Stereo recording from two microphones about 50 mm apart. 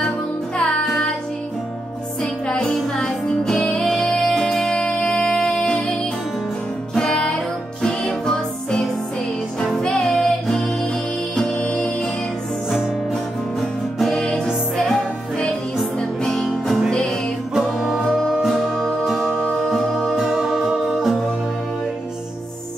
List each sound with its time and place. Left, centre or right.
2.4 s music: centre
7.0 s music: centre
11.6 s music: left
13.9 s music: centre
15.8 s music: centre
18.1 s music: centre
18.5 s music: centre
18.9 s music: centre
19.5 s music: centre
19.9 s music: centre